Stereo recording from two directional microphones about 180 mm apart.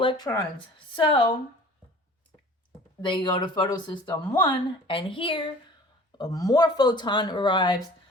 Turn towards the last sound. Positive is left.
turn(degrees=25)  # may be behind; listen again after turning